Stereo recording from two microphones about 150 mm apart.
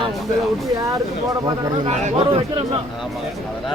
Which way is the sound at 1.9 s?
45° right (ahead or behind).